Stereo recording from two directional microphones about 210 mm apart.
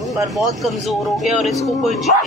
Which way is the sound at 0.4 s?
Centre (ahead or behind).